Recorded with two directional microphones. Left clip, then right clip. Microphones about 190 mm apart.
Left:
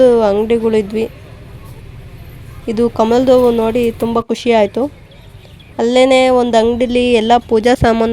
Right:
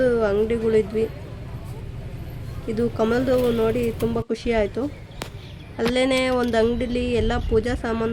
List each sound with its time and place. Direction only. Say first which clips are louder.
0.0 s a woman's voice: left 10 dB; 40° left (ahead or behind)
2.6 s speech: left 9 dB; 40° left (ahead or behind)